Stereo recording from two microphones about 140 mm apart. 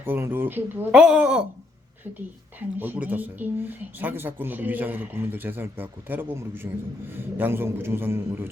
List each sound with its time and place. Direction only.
0.0 s speech: 15° right (ahead or behind)
2.7 s speech: 15° right (ahead or behind)